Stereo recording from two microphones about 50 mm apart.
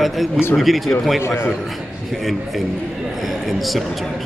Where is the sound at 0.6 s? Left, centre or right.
Centre.